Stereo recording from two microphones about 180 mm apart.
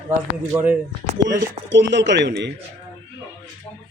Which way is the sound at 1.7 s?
80° right.